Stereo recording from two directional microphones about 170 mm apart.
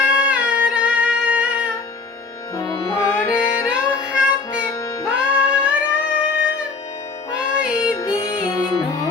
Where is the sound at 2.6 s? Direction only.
20° left (ahead or behind).